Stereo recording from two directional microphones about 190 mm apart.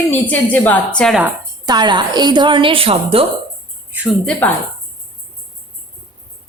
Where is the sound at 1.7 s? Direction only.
25° right (ahead or behind).